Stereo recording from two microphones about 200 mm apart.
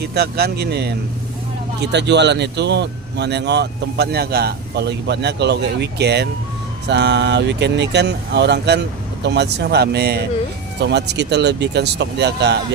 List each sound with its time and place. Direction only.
0.0 s speech: 55° right (ahead or behind)